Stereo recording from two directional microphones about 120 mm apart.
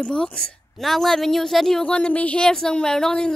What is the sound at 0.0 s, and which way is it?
A woman's voice, 5° left (ahead or behind).